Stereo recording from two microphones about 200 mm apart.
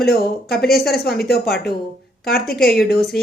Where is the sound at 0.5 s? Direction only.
50° left (ahead or behind).